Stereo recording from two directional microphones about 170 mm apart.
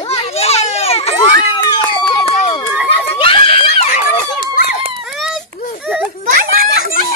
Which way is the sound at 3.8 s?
45° left (ahead or behind).